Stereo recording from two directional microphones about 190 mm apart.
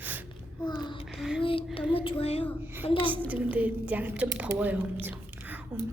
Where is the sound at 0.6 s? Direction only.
20° left (ahead or behind).